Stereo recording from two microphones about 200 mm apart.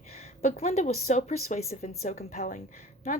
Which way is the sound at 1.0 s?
35° left (ahead or behind).